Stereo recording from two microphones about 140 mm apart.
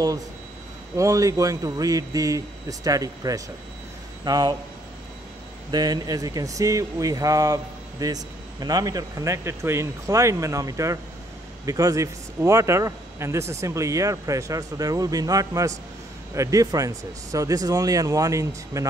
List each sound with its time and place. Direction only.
0.9 s a man's voice: 25° right (ahead or behind)
5.7 s speech: 30° right (ahead or behind)